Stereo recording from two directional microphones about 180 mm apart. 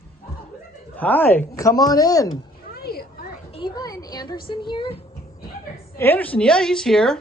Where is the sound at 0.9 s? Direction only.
10° left (ahead or behind).